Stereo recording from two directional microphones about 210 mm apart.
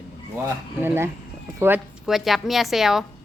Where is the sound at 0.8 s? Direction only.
10° right (ahead or behind).